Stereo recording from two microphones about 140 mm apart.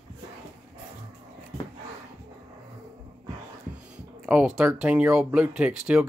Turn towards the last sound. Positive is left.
turn(degrees=-10)  # may be behind; listen again after turning